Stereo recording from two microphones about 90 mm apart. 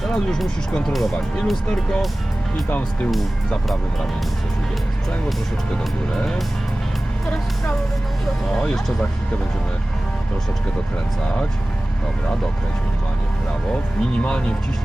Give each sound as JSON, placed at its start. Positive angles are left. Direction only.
{"t": 0.0, "sound": "speech", "side_deg": 5}
{"t": 2.6, "sound": "speech", "side_deg": 15}
{"t": 3.1, "sound": "speech", "side_deg": 0}
{"t": 6.1, "sound": "speech", "side_deg": 5}
{"t": 8.5, "sound": "speech", "side_deg": 10}